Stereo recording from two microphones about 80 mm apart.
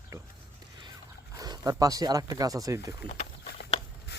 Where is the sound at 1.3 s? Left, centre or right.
Right.